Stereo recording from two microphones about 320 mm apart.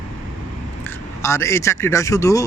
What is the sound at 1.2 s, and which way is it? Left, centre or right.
Speech, centre.